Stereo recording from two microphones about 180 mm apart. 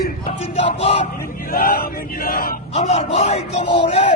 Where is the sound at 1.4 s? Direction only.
50° left (ahead or behind).